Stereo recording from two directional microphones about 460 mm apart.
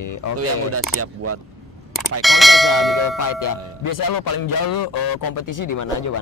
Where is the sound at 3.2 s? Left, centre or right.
Left.